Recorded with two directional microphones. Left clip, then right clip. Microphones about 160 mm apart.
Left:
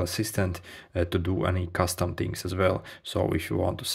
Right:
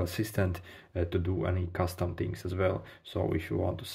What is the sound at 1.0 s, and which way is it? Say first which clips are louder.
Speech: left 5 dB; 40° left (ahead or behind).